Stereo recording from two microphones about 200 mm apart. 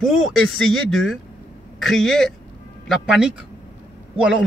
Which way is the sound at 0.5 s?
90° left.